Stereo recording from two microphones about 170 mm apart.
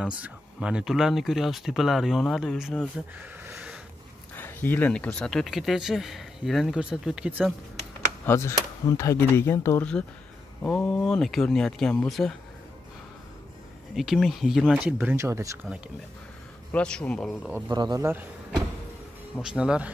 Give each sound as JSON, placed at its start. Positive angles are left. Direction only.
{"t": 0.0, "sound": "speech", "side_deg": -5}
{"t": 3.4, "sound": "a sound", "side_deg": -5}
{"t": 4.4, "sound": "speech", "side_deg": 10}
{"t": 8.3, "sound": "speech", "side_deg": 15}
{"t": 13.9, "sound": "speech", "side_deg": 0}
{"t": 16.7, "sound": "speech", "side_deg": 5}
{"t": 17.6, "sound": "speech", "side_deg": -25}
{"t": 19.5, "sound": "speech", "side_deg": -5}